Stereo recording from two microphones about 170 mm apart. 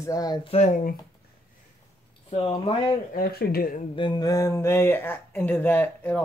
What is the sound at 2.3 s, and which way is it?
Speech, 35° left (ahead or behind).